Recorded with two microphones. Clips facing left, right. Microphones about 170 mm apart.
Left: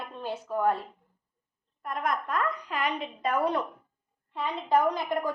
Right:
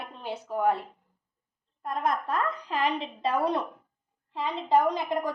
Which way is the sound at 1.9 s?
30° right (ahead or behind).